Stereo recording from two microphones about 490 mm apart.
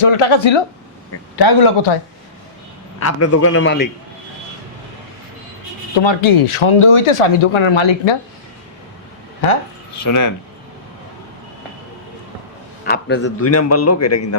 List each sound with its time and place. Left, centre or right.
0.0 s speech: left
1.4 s speech: left
3.0 s a man's voice: left
6.0 s speech: left
10.0 s speech: left
12.8 s a man's voice: centre